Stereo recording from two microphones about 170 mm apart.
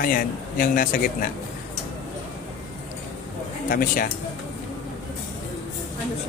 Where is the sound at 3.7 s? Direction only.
55° left (ahead or behind).